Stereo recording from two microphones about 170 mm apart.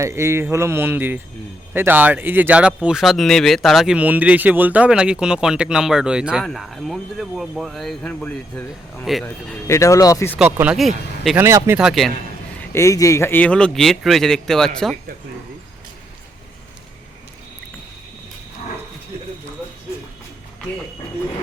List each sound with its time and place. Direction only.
0.0 s speech: 15° right (ahead or behind); by 9.6 s centre (ahead or behind)
9.6 s speech: 15° left (ahead or behind)
10.3 s speech: 5° right (ahead or behind)
11.3 s speech: 15° right (ahead or behind)
11.8 s speech: centre (ahead or behind)
12.7 s speech: 20° left (ahead or behind)